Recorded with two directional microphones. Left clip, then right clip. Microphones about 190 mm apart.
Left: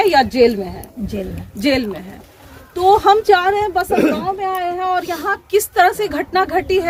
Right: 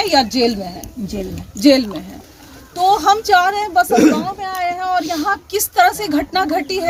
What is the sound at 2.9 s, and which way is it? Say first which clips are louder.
A woman's voice: left 2 dB; 20° left (ahead or behind).